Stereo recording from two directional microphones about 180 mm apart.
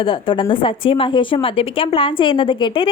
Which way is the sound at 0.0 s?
30° left (ahead or behind).